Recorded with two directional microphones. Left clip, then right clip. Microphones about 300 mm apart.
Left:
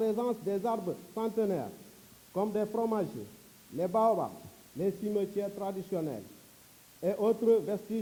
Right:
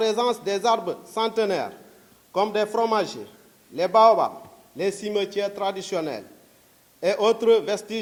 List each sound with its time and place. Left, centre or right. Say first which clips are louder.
0.0 s a man's voice: right 9 dB; centre